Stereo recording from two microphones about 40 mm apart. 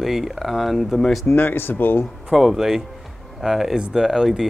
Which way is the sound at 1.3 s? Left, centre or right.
Left.